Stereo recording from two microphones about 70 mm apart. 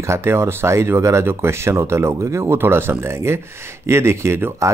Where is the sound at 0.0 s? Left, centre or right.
Right.